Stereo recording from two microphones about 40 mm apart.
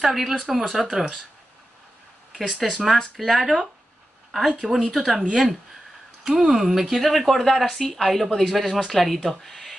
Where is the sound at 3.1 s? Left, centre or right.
Centre.